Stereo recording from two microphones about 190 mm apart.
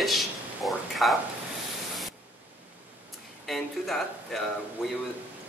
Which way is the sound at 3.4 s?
Centre (ahead or behind).